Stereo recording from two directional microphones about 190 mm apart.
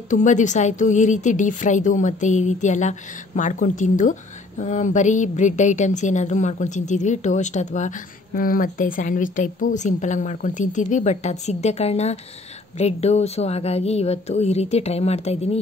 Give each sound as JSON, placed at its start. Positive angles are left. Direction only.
{"t": 0.1, "sound": "a woman's voice", "side_deg": 40}